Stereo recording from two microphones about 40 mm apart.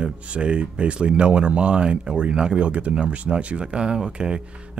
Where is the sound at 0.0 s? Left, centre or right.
Right.